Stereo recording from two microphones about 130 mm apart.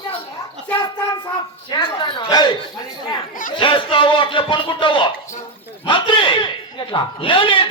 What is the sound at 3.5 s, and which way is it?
A man's voice, 40° left (ahead or behind).